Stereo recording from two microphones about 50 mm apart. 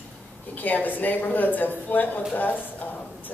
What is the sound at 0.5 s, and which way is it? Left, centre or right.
A woman's voice, left.